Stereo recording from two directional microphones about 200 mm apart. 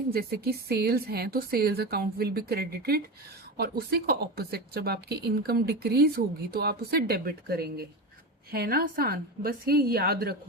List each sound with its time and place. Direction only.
0.1 s speech: 50° right (ahead or behind)